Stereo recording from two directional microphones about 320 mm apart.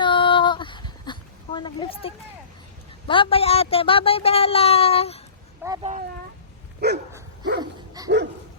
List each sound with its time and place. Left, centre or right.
0.0 s a sound: centre
3.1 s speech: centre
5.6 s speech: centre
6.7 s dog: right
7.6 s dog: centre